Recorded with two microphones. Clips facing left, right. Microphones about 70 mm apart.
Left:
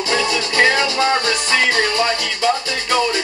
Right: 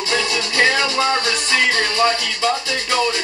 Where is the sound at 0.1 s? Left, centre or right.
Left.